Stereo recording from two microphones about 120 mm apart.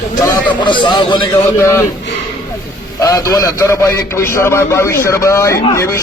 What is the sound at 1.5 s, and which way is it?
Speech, 25° left (ahead or behind).